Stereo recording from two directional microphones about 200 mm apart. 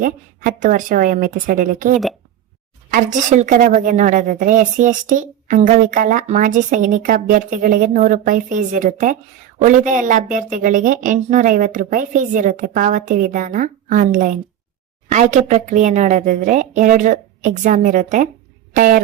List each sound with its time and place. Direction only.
0.0 s a woman's voice: 40° right (ahead or behind)
2.9 s a woman's voice: 40° right (ahead or behind)
18.7 s a sound: 45° right (ahead or behind)